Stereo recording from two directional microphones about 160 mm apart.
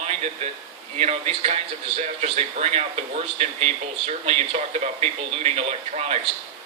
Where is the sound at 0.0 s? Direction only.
40° right (ahead or behind).